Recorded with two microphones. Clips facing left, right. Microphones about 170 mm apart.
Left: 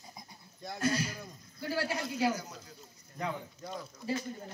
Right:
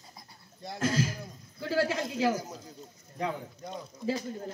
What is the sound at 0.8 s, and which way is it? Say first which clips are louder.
Speech: right 3 dB; 90° right.